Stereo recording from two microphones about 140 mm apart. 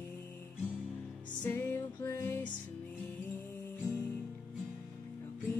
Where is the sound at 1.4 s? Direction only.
15° left (ahead or behind).